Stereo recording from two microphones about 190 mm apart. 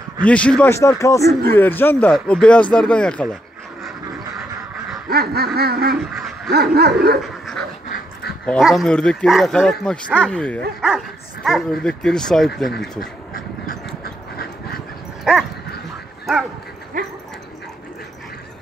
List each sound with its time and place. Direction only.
0.2 s speech: 5° left (ahead or behind)
5.1 s a sound: 55° right (ahead or behind)
6.1 s dog: centre (ahead or behind)
6.5 s a sound: 55° right (ahead or behind)
8.5 s speech: centre (ahead or behind)
14.0 s dog: 50° left (ahead or behind)
15.3 s speech: 5° right (ahead or behind)
17.0 s dog: 45° right (ahead or behind)